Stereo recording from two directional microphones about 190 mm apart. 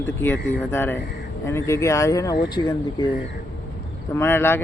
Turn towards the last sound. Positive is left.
turn(degrees=10)  # may be behind; listen again after turning